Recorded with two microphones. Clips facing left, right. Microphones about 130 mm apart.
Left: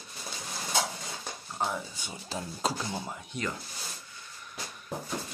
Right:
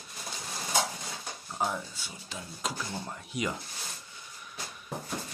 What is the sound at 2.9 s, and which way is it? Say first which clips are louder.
Speech: left 2 dB; 5° left (ahead or behind).